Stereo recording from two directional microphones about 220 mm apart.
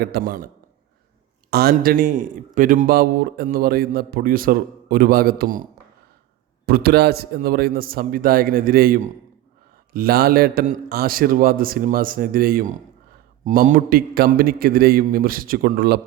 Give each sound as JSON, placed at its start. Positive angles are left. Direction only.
{"t": 0.0, "sound": "a man's voice", "side_deg": -45}
{"t": 6.7, "sound": "a man's voice", "side_deg": -45}